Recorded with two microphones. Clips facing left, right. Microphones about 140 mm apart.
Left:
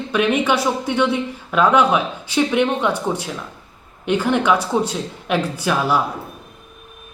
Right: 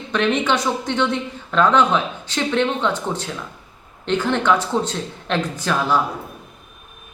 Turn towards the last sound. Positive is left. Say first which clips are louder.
# left 1 dB
turn(degrees=10)  # may be behind; listen again after turning